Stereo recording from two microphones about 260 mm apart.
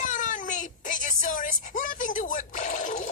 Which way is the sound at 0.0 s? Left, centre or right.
Left.